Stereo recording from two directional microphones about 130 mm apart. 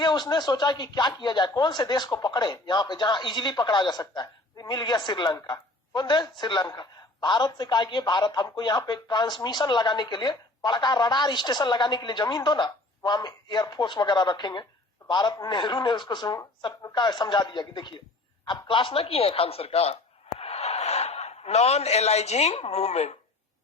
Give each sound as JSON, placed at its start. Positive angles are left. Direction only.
{"t": 0.0, "sound": "a man's voice", "side_deg": 35}